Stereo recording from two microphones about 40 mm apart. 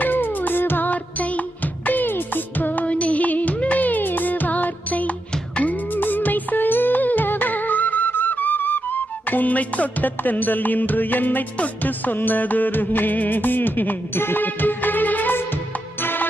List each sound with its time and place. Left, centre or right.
0.0 s music: left
0.9 s music: left
2.8 s music: left
14.2 s music: left
14.4 s music: left
16.0 s music: left